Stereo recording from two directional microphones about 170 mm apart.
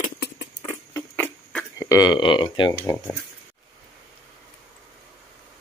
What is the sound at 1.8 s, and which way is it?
Speech, 20° left (ahead or behind).